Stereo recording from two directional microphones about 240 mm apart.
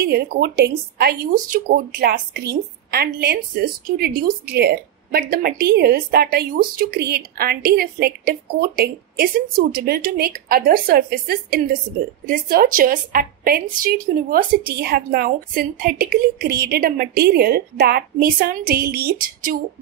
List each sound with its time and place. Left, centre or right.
0.0 s speech: right